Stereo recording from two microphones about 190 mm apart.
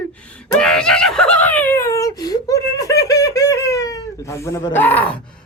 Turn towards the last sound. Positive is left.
turn(degrees=10)  # may be behind; listen again after turning